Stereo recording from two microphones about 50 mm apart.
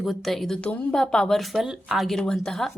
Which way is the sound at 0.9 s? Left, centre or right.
Centre.